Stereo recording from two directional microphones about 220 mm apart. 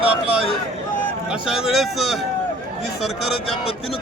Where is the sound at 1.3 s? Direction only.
Centre (ahead or behind).